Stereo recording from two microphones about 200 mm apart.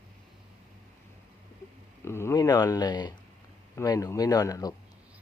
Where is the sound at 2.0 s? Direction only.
15° left (ahead or behind).